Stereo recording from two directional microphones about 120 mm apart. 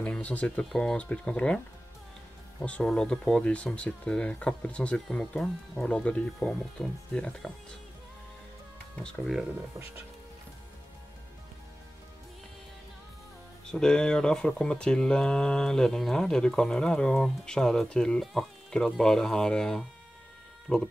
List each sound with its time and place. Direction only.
0.0 s speech: 10° left (ahead or behind)
2.6 s speech: 5° left (ahead or behind)
8.9 s speech: 5° left (ahead or behind)
13.7 s speech: 5° left (ahead or behind)